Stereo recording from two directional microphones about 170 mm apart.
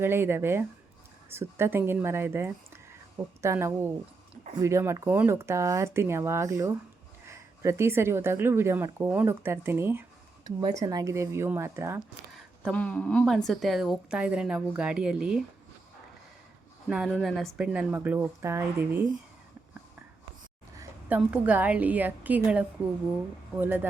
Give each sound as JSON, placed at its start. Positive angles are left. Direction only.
{"t": 0.0, "sound": "a woman's voice", "side_deg": -15}
{"t": 12.6, "sound": "a woman's voice", "side_deg": 10}
{"t": 16.9, "sound": "a woman's voice", "side_deg": 0}
{"t": 21.2, "sound": "a woman's voice", "side_deg": -10}